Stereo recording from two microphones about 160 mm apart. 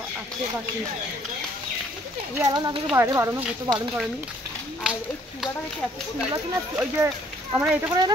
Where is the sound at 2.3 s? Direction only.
25° right (ahead or behind).